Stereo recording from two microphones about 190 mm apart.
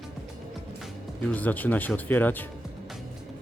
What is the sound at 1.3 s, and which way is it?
Speech, 10° left (ahead or behind).